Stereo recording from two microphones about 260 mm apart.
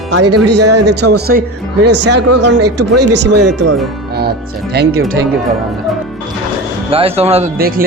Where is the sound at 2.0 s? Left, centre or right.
Right.